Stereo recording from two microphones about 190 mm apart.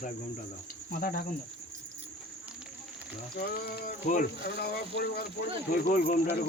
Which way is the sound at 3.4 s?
50° left (ahead or behind).